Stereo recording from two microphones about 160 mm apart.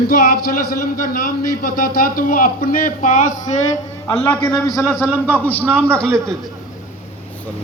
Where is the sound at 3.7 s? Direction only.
20° left (ahead or behind).